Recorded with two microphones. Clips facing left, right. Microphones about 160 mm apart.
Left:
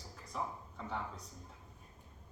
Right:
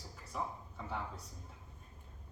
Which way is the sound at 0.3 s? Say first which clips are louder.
Even; 5° right (ahead or behind).